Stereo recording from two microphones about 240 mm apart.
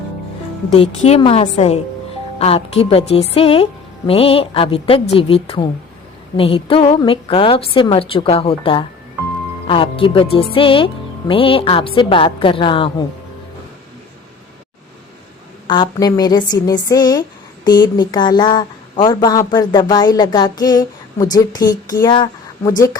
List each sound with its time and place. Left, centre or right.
0.7 s a woman's voice: left
15.6 s a woman's voice: centre